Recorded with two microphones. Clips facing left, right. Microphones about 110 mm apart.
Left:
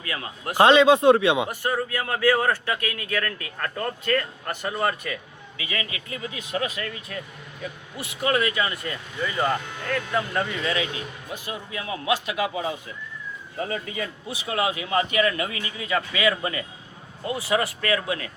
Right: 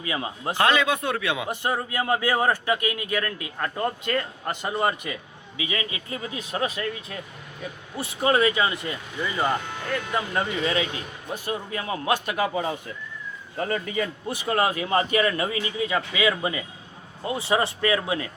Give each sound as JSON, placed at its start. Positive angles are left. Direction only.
{"t": 0.0, "sound": "speech", "side_deg": -20}
{"t": 0.5, "sound": "speech", "side_deg": 25}
{"t": 1.5, "sound": "a man's voice", "side_deg": -20}
{"t": 10.2, "sound": "speech", "side_deg": -25}
{"t": 11.4, "sound": "a man's voice", "side_deg": -40}
{"t": 13.7, "sound": "a man's voice", "side_deg": -50}